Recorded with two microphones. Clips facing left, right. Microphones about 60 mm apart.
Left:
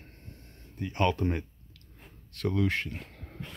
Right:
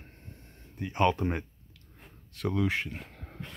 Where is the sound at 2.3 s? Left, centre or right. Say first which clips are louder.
Left 1 dB; centre.